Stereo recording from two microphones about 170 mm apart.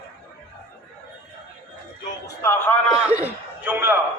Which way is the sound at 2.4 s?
15° left (ahead or behind).